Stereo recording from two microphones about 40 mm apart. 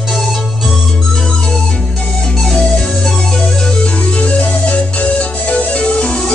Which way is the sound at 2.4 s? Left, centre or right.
Centre.